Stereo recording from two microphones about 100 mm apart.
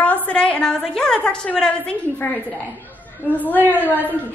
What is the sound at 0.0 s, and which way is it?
A woman's voice, 15° left (ahead or behind).